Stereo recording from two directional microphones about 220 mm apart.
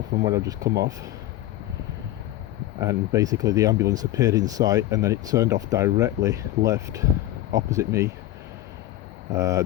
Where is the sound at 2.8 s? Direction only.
15° right (ahead or behind).